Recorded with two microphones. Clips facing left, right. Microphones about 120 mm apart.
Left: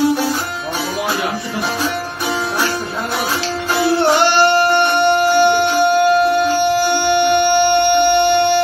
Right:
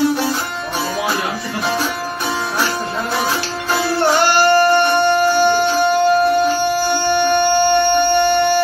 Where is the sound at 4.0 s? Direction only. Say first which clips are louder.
Even; 60° left (ahead or behind).